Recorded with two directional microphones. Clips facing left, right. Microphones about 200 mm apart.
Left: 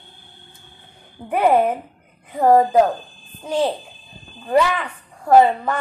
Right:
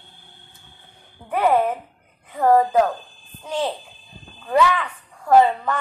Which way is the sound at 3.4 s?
35° left (ahead or behind).